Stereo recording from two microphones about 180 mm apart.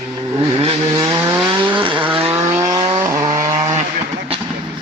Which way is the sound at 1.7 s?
30° right (ahead or behind).